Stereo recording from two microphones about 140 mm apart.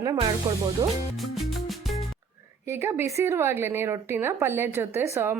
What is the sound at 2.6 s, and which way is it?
A woman's voice, 20° right (ahead or behind).